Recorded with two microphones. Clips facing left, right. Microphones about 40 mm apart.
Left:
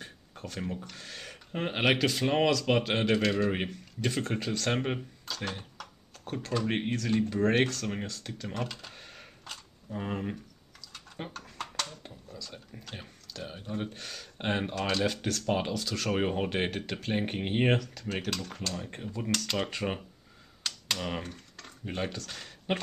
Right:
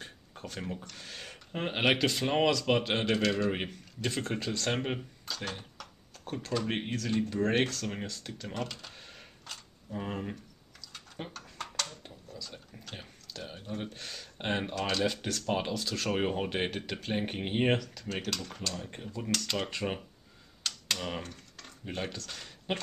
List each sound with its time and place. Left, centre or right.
0.0 s a sound: centre
0.9 s speech: centre
20.6 s typing: centre